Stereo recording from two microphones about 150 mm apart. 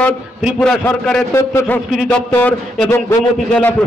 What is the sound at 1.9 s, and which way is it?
A man's voice, centre (ahead or behind).